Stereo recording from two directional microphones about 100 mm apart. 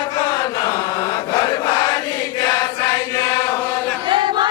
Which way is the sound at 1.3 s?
40° left (ahead or behind).